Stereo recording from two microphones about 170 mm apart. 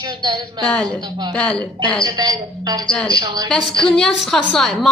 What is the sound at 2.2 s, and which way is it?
A woman's voice, 25° right (ahead or behind).